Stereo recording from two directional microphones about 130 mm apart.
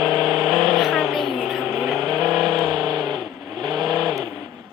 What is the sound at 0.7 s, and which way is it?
Vehicle, centre (ahead or behind).